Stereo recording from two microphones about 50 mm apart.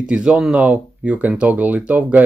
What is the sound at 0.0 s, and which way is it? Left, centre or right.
Speech, centre.